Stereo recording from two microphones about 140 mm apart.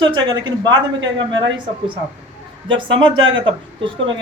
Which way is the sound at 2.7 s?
40° right (ahead or behind).